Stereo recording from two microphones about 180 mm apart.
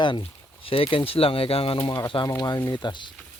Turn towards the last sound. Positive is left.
turn(degrees=25)  # may be behind; listen again after turning